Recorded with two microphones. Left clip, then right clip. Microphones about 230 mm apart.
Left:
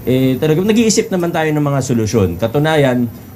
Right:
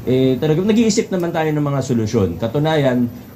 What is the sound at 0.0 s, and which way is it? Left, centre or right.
Speech, left.